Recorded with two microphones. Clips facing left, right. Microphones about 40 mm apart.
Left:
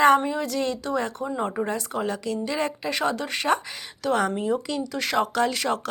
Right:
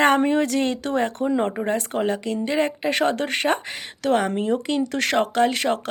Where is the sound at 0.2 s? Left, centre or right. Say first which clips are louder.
Right 7 dB; right.